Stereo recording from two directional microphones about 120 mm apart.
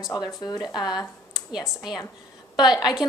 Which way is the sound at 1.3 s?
5° right (ahead or behind).